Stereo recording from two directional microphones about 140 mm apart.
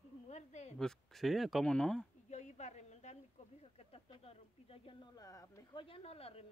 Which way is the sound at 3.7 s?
45° left (ahead or behind).